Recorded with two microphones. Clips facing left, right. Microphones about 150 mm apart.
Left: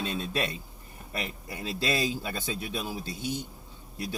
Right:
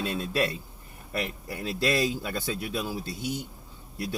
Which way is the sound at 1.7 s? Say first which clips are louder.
Right 3 dB; 30° left (ahead or behind).